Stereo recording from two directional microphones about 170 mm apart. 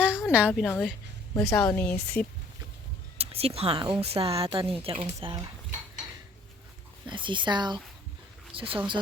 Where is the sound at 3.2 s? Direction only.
35° right (ahead or behind).